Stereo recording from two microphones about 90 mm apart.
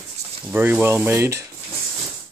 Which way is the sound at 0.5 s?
25° right (ahead or behind).